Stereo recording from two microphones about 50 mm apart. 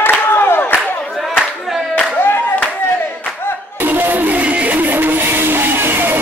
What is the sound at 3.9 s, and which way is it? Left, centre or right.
Music, right.